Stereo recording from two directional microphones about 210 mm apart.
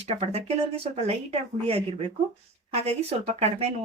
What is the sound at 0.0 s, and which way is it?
Speech, 30° right (ahead or behind).